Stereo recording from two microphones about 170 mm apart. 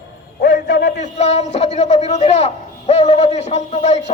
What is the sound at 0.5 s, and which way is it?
Speech, 90° left.